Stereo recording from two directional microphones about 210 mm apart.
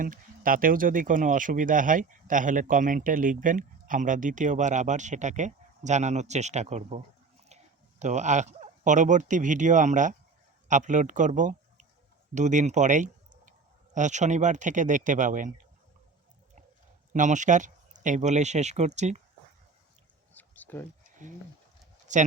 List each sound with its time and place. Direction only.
0.0 s speech: 40° right (ahead or behind)
17.1 s speech: 35° right (ahead or behind)
20.3 s a sound: 10° left (ahead or behind)
21.2 s speech: 35° right (ahead or behind)